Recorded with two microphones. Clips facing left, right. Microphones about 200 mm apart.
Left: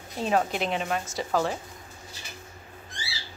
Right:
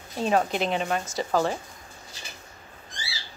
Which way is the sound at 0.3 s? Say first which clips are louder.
Right 2 dB; centre (ahead or behind).